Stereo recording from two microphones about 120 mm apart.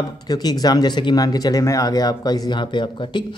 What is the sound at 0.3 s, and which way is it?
A man's voice, 35° left (ahead or behind).